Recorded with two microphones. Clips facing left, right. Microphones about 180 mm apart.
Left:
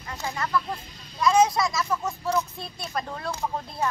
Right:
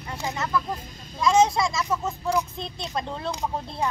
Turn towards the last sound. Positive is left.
turn(degrees=-15)  # may be behind; listen again after turning